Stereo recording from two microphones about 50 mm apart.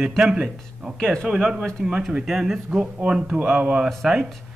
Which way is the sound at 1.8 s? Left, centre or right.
Centre.